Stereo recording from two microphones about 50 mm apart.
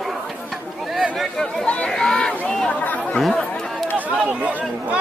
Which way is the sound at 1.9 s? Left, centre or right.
Centre.